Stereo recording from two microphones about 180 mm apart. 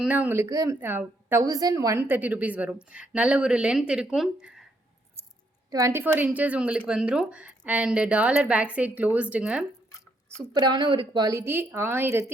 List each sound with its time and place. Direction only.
0.0 s a woman's voice: 10° right (ahead or behind)
5.7 s a woman's voice: 15° right (ahead or behind)
10.3 s a woman's voice: 25° right (ahead or behind)